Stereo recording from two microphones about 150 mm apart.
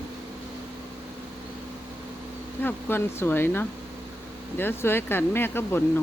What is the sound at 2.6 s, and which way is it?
Speech, 15° left (ahead or behind).